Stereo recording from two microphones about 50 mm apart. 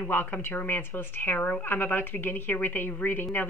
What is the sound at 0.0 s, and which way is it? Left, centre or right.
A woman's voice, left.